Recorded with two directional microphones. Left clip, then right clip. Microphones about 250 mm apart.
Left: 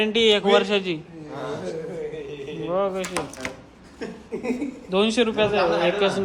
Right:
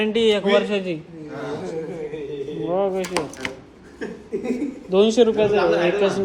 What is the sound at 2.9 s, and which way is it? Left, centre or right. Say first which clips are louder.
Speech: right 4 dB; centre.